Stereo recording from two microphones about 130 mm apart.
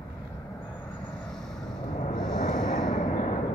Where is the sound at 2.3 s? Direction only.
70° left (ahead or behind).